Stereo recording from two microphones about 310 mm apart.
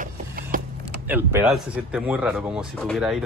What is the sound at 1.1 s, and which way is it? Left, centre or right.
Speech, centre.